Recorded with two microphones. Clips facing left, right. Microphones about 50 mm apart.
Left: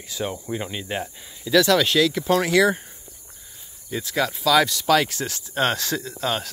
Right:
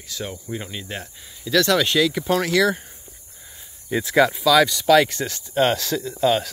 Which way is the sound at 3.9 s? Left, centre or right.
Right.